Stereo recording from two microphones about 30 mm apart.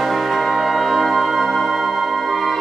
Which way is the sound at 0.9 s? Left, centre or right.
Centre.